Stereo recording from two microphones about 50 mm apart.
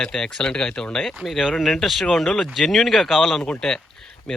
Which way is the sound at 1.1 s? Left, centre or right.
Centre.